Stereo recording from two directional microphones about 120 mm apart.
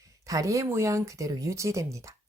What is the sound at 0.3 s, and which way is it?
Speech, 30° right (ahead or behind).